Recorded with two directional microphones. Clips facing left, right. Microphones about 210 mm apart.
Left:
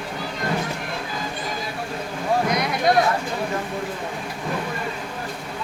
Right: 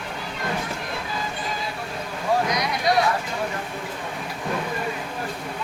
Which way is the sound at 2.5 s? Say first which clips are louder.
Left 3 dB; 55° left (ahead or behind).